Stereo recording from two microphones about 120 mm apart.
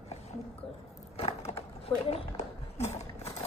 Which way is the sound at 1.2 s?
60° left (ahead or behind).